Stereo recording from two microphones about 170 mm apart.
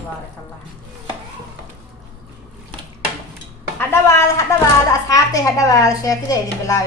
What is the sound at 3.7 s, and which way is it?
A woman's voice, 15° left (ahead or behind).